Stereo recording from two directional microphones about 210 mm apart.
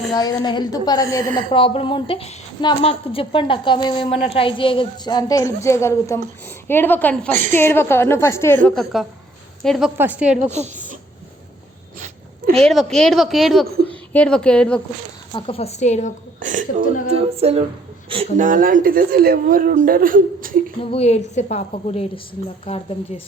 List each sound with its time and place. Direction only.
0.1 s a woman's voice: 20° left (ahead or behind)
8.6 s a woman's voice: centre (ahead or behind)
10.5 s a woman's voice: 35° right (ahead or behind)
12.5 s a woman's voice: centre (ahead or behind)
15.3 s a woman's voice: 25° left (ahead or behind)
16.4 s speech: 35° right (ahead or behind)
17.1 s music: 30° right (ahead or behind)
18.1 s speech: 35° right (ahead or behind)
20.9 s a woman's voice: 30° left (ahead or behind)